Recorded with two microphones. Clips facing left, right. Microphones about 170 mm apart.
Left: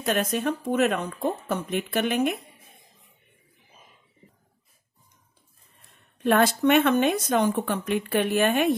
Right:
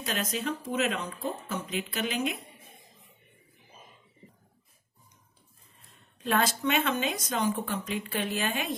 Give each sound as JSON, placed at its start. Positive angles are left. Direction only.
{"t": 0.0, "sound": "speech", "side_deg": 60}
{"t": 6.1, "sound": "speech", "side_deg": 60}